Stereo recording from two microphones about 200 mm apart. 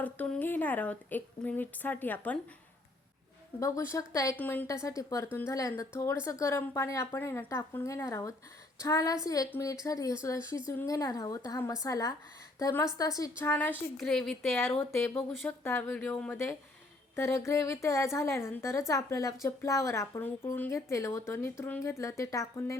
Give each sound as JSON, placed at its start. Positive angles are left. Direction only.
{"t": 0.0, "sound": "a woman's voice", "side_deg": 5}
{"t": 3.6, "sound": "a woman's voice", "side_deg": 15}